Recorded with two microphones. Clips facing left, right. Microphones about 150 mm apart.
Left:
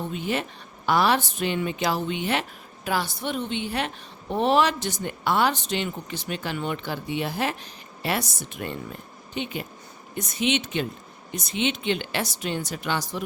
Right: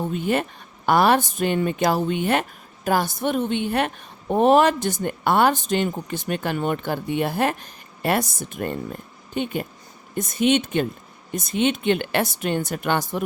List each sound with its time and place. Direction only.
0.1 s speech: 50° right (ahead or behind)